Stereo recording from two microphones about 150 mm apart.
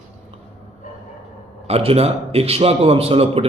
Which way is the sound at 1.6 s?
40° right (ahead or behind).